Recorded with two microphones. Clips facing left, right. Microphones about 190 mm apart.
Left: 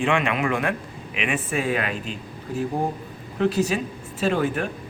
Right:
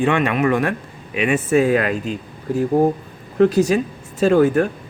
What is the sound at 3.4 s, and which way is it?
Speech, 45° right (ahead or behind).